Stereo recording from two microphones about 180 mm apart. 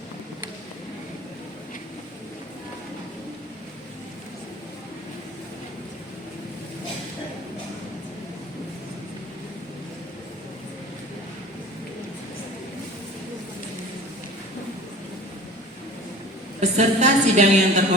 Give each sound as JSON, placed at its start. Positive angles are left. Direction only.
{"t": 16.6, "sound": "a woman's voice", "side_deg": -40}